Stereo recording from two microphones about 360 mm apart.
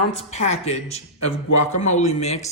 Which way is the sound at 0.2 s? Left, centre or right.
Centre.